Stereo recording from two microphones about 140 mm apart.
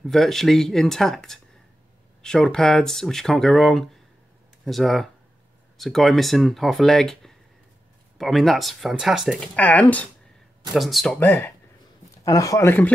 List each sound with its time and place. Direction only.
0.0 s speech: centre (ahead or behind)
9.4 s speech: 10° left (ahead or behind)
10.7 s speech: centre (ahead or behind)
11.1 s speech: 15° left (ahead or behind)